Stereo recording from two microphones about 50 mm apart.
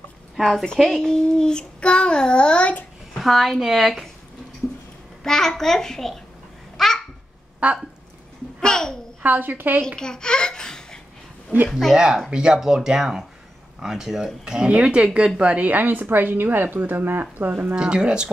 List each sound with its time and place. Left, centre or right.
0.4 s a woman's voice: centre; by 2.8 s left
3.2 s a woman's voice: centre
5.2 s a child's voice: centre
6.8 s babbling: centre
7.6 s speech: right
8.5 s babbling: centre
9.2 s a woman's voice: right
9.9 s speech: centre
11.9 s speech: centre
14.7 s a woman's voice: right
17.7 s speech: right